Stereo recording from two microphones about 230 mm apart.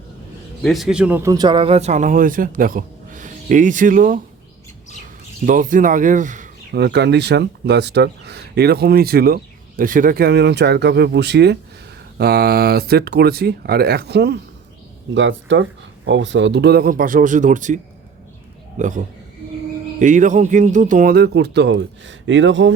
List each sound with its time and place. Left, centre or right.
0.6 s speech: centre; by 4.2 s right
5.5 s speech: right
18.8 s speech: right